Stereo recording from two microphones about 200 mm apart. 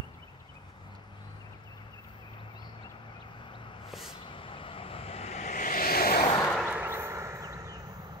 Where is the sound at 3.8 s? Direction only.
Centre (ahead or behind).